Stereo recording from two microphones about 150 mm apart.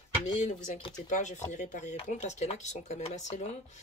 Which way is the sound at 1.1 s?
55° left (ahead or behind).